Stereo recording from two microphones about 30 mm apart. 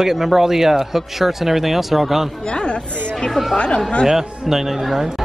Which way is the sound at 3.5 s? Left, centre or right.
Left.